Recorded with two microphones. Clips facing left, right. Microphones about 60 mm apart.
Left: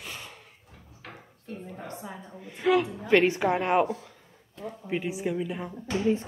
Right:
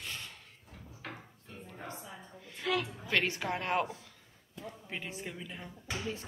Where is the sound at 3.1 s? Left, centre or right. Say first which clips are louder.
Left 10 dB; left.